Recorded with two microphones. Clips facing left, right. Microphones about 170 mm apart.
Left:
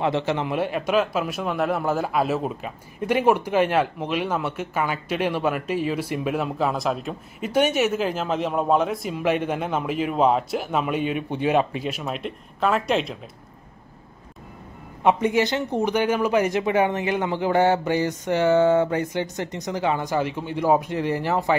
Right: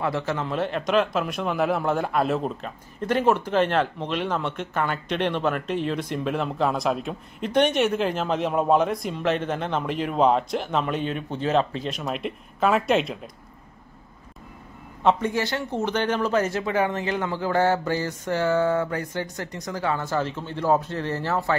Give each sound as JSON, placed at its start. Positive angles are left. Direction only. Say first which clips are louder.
{"t": 0.0, "sound": "a man's voice", "louder": "left 3 dB", "side_deg": 20}
{"t": 15.0, "sound": "a man's voice", "louder": "left 3 dB", "side_deg": 15}